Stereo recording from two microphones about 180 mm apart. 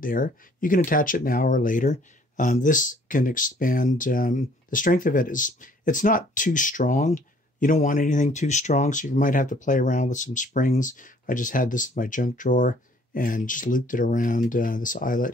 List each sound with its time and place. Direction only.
0.0 s speech: 50° left (ahead or behind)